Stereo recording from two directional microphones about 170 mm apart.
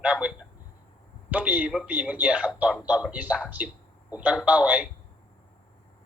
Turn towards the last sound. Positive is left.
turn(degrees=-10)  # may be behind; listen again after turning